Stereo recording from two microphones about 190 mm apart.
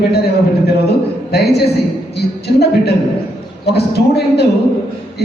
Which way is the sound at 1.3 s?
55° left (ahead or behind).